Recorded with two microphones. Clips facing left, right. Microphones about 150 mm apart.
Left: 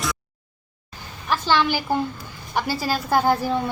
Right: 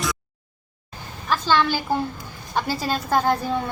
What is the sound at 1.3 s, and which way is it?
Speech, 15° left (ahead or behind).